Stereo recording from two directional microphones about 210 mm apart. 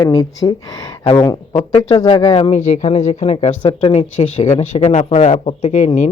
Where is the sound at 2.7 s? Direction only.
30° left (ahead or behind).